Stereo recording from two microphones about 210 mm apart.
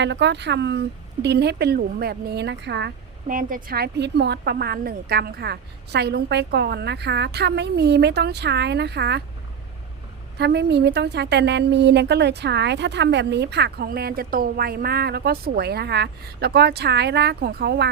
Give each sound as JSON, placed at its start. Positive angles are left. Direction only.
{"t": 0.0, "sound": "a woman's voice", "side_deg": -55}
{"t": 3.2, "sound": "a woman's voice", "side_deg": -40}
{"t": 10.3, "sound": "a woman's voice", "side_deg": -50}